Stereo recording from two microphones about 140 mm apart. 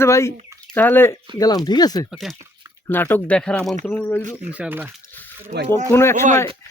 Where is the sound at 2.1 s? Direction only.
Centre (ahead or behind).